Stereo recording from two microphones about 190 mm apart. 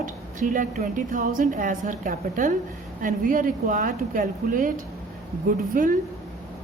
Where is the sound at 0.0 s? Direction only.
45° right (ahead or behind).